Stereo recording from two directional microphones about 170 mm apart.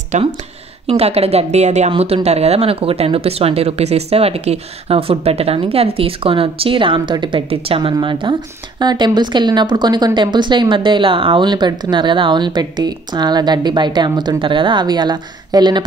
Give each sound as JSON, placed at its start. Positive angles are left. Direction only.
{"t": 0.1, "sound": "a woman's voice", "side_deg": -45}